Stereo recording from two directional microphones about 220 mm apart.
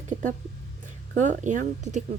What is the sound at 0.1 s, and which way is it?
Speech, 35° right (ahead or behind).